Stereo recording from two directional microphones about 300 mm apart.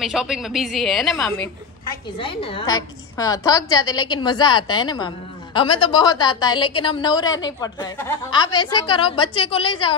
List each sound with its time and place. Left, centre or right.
0.0 s a woman's voice: centre
2.1 s a woman's voice: centre